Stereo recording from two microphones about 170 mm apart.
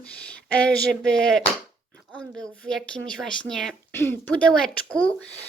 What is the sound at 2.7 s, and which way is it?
Speech, 5° left (ahead or behind).